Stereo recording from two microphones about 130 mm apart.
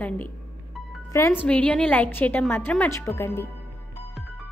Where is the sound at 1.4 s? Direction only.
10° left (ahead or behind).